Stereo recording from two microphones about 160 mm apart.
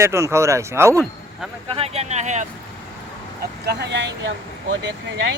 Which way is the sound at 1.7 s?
40° right (ahead or behind).